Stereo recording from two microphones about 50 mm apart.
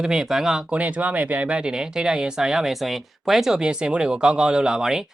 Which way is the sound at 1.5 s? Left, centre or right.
Centre.